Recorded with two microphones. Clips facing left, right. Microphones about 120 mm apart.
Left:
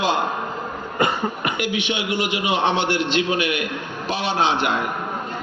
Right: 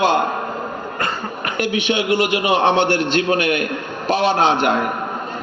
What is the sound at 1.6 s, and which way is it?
A man's voice, 55° right (ahead or behind).